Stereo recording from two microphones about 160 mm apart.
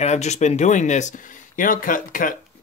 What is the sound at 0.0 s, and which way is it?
Speech, 45° left (ahead or behind).